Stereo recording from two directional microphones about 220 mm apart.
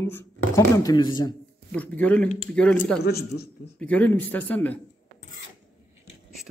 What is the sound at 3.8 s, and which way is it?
Speech, 5° left (ahead or behind).